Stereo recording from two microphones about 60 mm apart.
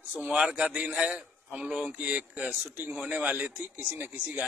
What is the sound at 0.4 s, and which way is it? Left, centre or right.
A man's voice, centre.